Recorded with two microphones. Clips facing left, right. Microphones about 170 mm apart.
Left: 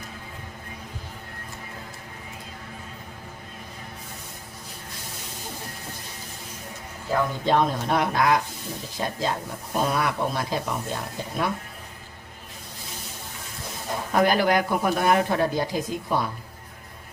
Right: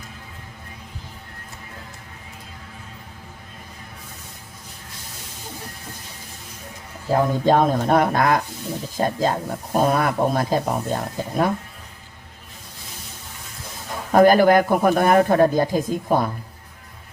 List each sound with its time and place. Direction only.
7.1 s speech: 40° right (ahead or behind)
14.1 s speech: 45° right (ahead or behind)